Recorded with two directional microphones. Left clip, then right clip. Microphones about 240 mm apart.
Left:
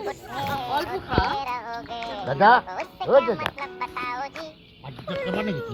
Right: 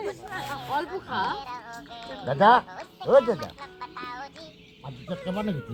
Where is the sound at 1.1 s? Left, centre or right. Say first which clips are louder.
Left 4 dB; centre.